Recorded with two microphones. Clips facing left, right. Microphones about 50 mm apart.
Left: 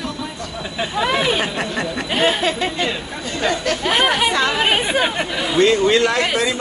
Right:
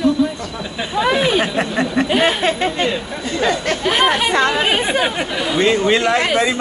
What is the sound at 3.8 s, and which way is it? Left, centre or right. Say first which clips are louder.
Chatter: right 1 dB; centre.